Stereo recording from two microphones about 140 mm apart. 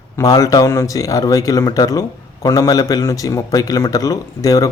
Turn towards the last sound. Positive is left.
turn(degrees=25)  # may be behind; listen again after turning